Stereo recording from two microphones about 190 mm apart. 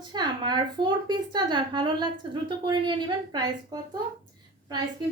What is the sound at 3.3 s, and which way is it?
Speech, 20° right (ahead or behind).